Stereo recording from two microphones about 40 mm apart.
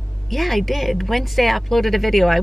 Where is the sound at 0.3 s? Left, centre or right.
Centre.